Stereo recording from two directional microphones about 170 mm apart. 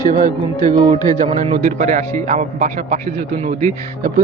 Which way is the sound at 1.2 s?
35° right (ahead or behind).